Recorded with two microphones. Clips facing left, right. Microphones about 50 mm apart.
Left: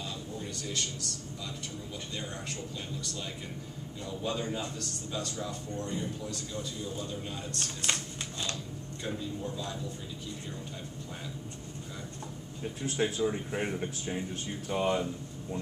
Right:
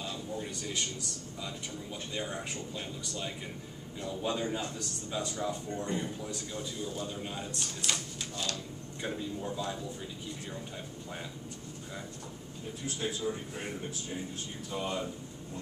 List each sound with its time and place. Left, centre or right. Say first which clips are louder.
0.4 s a sound: left 3 dB; centre
4.0 s speech: right 1 dB; centre
12.8 s speech: left 5 dB; left